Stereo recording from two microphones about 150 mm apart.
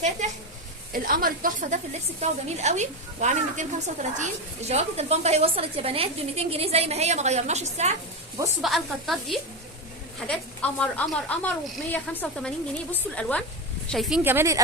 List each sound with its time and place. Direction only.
0.9 s a woman's voice: 70° right (ahead or behind); by 7.9 s 45° right (ahead or behind)
8.6 s a woman's voice: centre (ahead or behind)
14.3 s speech: 15° right (ahead or behind)